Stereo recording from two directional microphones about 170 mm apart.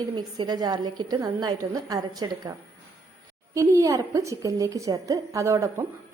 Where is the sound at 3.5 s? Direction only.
20° right (ahead or behind).